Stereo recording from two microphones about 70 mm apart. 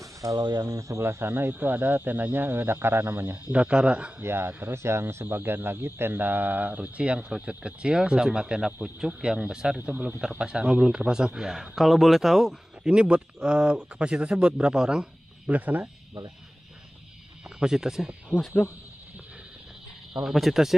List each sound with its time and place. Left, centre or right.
0.0 s a sound: right
0.5 s speech: right
1.0 s speech: right
3.5 s a man's voice: centre
4.2 s a man's voice: right; by 9.8 s centre
9.8 s a man's voice: right; by 12.5 s centre
12.8 s a man's voice: centre
17.6 s a man's voice: centre
20.1 s speech: centre